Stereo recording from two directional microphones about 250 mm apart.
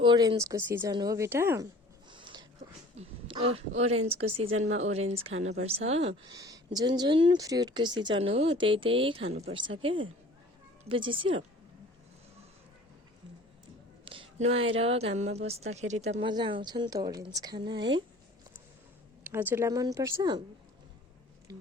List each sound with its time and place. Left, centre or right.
0.0 s speech: centre
2.0 s a sound: centre
3.8 s speech: right
14.0 s speech: right
19.2 s speech: centre